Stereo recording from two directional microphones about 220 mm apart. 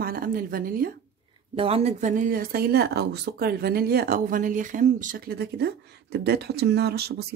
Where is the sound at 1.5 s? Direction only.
25° right (ahead or behind).